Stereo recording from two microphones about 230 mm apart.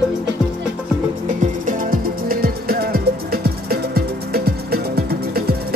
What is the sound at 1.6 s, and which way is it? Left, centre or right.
Music, right.